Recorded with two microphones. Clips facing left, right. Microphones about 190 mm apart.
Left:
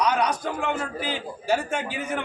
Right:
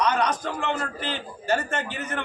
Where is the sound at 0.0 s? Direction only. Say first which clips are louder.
Even; 10° left (ahead or behind).